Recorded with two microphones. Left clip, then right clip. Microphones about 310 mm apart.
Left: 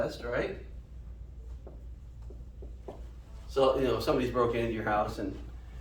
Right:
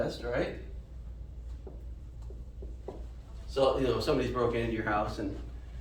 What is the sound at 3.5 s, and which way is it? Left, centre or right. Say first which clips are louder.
Speech: left 1 dB; centre.